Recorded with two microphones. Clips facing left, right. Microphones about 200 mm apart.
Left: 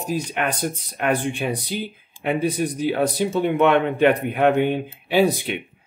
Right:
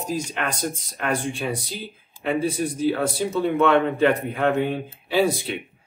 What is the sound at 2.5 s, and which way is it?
Speech, 20° left (ahead or behind).